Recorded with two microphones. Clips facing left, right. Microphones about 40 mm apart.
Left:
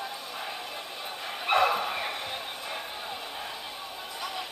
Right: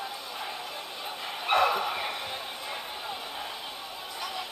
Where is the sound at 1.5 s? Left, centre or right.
Left.